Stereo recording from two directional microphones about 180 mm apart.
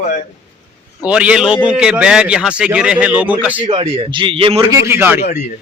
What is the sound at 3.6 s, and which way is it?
A man's voice, 30° right (ahead or behind).